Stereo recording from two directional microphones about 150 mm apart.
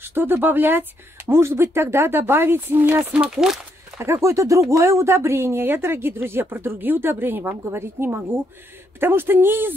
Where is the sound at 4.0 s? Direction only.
20° right (ahead or behind).